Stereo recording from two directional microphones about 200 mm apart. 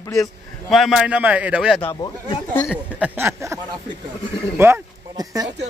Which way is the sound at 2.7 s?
10° right (ahead or behind).